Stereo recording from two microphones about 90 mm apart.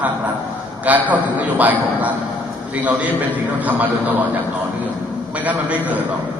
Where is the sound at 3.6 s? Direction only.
15° right (ahead or behind).